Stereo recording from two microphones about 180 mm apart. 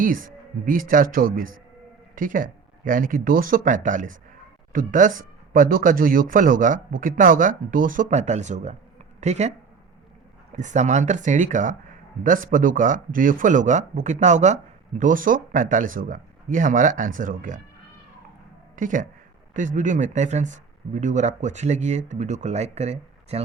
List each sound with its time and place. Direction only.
0.0 s speech: 50° right (ahead or behind)
18.8 s speech: 45° right (ahead or behind)